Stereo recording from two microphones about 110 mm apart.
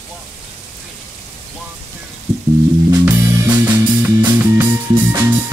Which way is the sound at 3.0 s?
20° right (ahead or behind).